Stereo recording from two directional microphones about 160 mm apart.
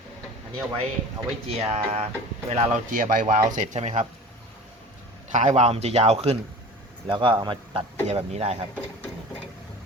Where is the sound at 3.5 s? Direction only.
45° right (ahead or behind).